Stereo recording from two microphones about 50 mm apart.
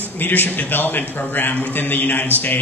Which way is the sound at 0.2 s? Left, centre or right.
Left.